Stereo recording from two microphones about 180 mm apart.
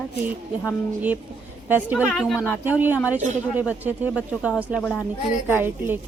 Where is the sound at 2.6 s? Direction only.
10° right (ahead or behind).